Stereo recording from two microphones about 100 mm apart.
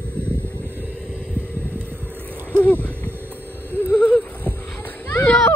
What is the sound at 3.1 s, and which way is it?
Vehicle, 20° right (ahead or behind).